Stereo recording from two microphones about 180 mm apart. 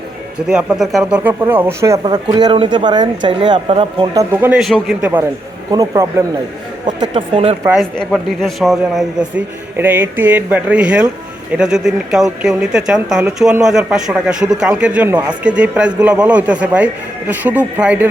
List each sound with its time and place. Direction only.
0.4 s a man's voice: 5° right (ahead or behind)
1.3 s speech: 15° right (ahead or behind)
5.7 s speech: 20° right (ahead or behind)
7.8 s a man's voice: centre (ahead or behind)